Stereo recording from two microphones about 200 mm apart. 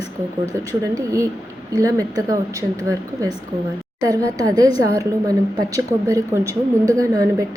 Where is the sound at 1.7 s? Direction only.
15° right (ahead or behind).